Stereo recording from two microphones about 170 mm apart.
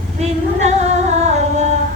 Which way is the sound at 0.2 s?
40° right (ahead or behind).